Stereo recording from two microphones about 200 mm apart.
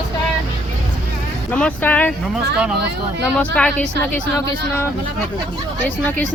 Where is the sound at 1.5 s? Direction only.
5° left (ahead or behind).